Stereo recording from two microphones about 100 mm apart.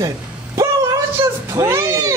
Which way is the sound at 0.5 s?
35° right (ahead or behind).